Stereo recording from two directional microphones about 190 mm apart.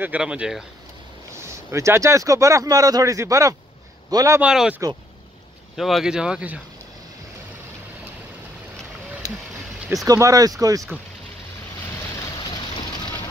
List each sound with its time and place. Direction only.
0.0 s speech: 5° right (ahead or behind)
4.4 s speech: 5° right (ahead or behind)
10.0 s speech: 15° right (ahead or behind)
12.2 s vehicle: 20° left (ahead or behind)